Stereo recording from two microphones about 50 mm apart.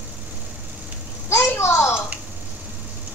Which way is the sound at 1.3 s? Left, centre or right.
Left.